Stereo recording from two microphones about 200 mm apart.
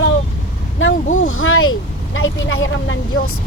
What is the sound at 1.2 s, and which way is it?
Speech, 90° left.